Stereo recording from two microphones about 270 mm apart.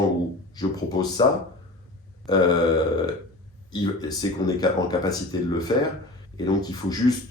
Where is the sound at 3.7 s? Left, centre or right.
Centre.